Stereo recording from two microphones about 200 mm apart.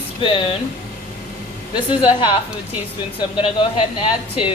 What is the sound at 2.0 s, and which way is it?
Speech, 25° left (ahead or behind).